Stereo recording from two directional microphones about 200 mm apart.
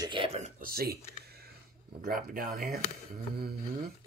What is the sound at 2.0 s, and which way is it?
Speech, 45° right (ahead or behind).